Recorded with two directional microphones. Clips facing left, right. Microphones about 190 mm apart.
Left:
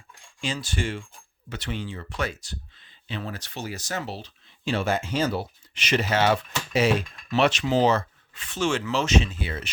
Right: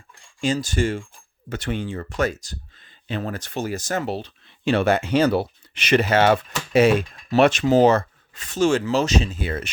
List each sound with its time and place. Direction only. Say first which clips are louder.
0.4 s speech: right 8 dB; 45° right (ahead or behind)